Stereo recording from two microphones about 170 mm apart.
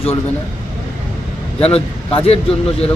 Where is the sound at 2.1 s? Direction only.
35° left (ahead or behind).